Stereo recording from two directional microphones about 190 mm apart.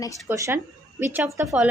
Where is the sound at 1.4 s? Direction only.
Centre (ahead or behind).